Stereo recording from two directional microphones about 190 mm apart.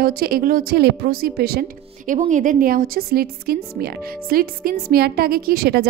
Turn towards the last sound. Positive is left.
turn(degrees=-55)  # may be behind; listen again after turning